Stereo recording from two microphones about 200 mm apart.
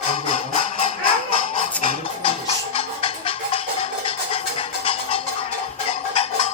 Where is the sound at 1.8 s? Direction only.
30° left (ahead or behind).